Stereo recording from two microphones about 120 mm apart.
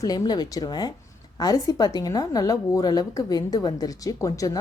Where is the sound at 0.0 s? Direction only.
35° left (ahead or behind).